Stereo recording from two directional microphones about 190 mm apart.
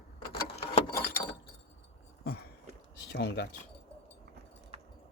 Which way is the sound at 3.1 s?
65° left (ahead or behind).